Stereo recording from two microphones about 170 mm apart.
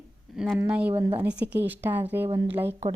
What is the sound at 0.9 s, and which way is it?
Speech, 35° right (ahead or behind).